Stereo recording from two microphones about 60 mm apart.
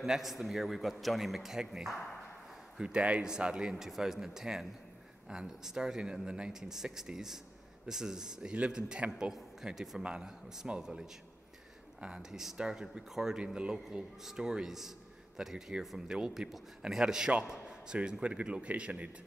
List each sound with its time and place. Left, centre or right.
0.0 s a man's voice: centre